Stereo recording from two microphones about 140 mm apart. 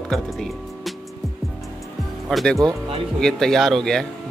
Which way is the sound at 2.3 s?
Centre (ahead or behind).